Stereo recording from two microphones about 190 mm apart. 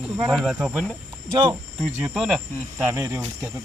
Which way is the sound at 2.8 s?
15° right (ahead or behind).